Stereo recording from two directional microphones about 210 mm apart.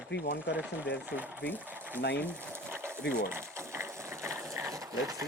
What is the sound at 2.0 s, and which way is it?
Speech, 55° left (ahead or behind).